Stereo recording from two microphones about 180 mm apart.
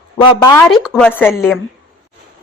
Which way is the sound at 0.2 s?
20° left (ahead or behind).